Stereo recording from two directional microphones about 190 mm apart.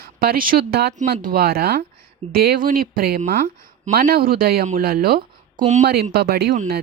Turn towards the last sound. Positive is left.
turn(degrees=-55)  # may be behind; listen again after turning